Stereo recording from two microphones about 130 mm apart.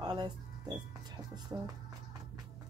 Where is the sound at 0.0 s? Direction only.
35° right (ahead or behind).